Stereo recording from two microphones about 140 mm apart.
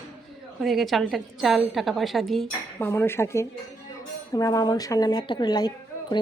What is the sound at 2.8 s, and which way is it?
A woman's voice, 15° left (ahead or behind).